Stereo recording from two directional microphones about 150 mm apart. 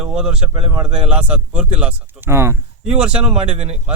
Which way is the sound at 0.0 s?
5° right (ahead or behind).